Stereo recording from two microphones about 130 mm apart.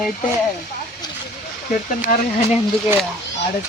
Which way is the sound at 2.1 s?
90° left.